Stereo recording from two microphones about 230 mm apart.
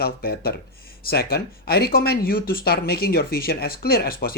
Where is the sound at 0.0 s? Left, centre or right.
Left.